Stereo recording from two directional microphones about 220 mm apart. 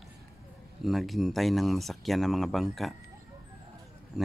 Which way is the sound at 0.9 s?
Centre (ahead or behind).